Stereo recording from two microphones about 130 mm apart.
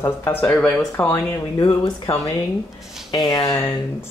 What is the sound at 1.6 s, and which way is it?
Speech, 45° left (ahead or behind).